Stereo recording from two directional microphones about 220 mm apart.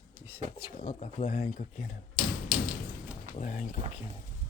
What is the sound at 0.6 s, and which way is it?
Speech, 35° left (ahead or behind).